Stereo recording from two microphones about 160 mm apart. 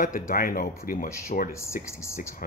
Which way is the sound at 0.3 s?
60° left (ahead or behind).